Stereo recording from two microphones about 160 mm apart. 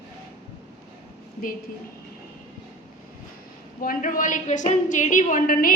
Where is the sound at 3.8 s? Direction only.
55° left (ahead or behind).